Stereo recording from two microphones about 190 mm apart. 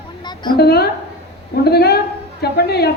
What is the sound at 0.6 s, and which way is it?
A woman's voice, 55° left (ahead or behind).